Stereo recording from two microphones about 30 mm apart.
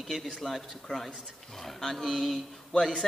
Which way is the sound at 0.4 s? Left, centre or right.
Centre.